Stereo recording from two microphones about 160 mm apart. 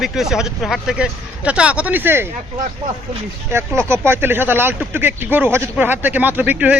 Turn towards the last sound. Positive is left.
turn(degrees=-10)  # may be behind; listen again after turning